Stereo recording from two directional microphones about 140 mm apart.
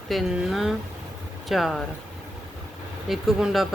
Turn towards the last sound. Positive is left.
turn(degrees=0)  # may be behind; listen again after turning